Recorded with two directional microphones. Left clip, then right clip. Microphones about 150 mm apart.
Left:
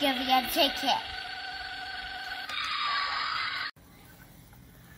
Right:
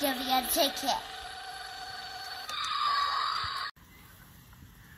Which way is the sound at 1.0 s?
10° right (ahead or behind).